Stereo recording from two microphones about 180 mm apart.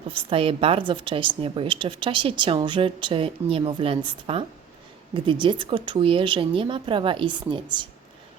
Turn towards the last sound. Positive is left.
turn(degrees=-25)  # may be behind; listen again after turning